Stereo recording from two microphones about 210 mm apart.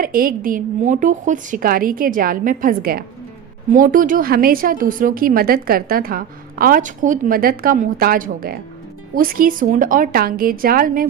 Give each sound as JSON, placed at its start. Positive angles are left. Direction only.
{"t": 0.0, "sound": "a woman's voice", "side_deg": -45}